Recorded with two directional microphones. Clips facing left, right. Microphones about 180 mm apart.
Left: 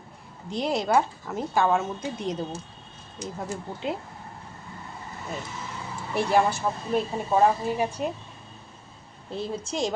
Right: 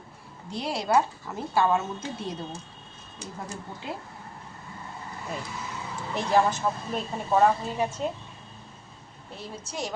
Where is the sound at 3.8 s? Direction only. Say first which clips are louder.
Left 6 dB; 20° left (ahead or behind).